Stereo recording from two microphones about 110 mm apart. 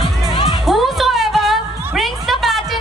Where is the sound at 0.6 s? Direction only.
Centre (ahead or behind).